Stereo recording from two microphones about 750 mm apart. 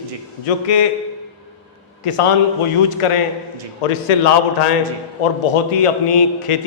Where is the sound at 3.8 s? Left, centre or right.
Left.